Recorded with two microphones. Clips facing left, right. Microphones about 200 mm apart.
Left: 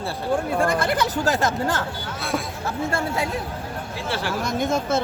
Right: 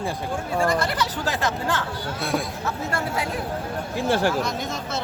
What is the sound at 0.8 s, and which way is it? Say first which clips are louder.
Speech: left 3 dB; 50° left (ahead or behind).